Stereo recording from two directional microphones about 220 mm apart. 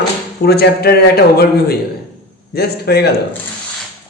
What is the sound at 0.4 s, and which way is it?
A woman's voice, 45° left (ahead or behind).